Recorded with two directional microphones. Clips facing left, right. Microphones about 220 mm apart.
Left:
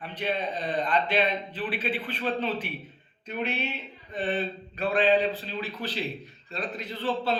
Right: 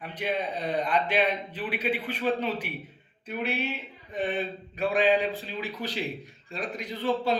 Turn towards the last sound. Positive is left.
turn(degrees=-10)  # may be behind; listen again after turning